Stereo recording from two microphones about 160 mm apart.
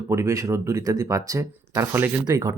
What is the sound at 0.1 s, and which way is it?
Speech, 20° right (ahead or behind).